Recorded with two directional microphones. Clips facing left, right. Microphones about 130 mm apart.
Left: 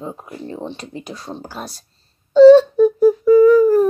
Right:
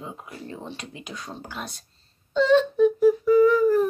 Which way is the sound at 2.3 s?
35° left (ahead or behind).